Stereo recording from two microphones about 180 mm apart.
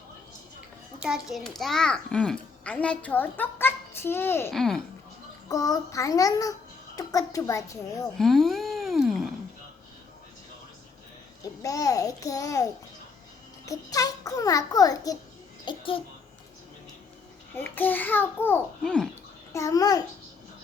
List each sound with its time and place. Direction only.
1.0 s a child's voice: centre (ahead or behind); by 4.5 s 15° left (ahead or behind)
4.5 s a child's voice: centre (ahead or behind)
5.5 s a child's voice: 20° left (ahead or behind)
8.2 s a sound: centre (ahead or behind)
11.6 s a sound: 20° left (ahead or behind)
13.7 s a child's voice: 20° left (ahead or behind)
15.6 s a sound: 30° left (ahead or behind)
17.5 s a child's voice: 10° left (ahead or behind)
19.5 s a child's voice: 20° left (ahead or behind)